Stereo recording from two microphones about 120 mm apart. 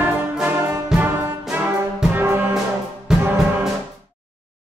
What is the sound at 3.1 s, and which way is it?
Music, 5° right (ahead or behind).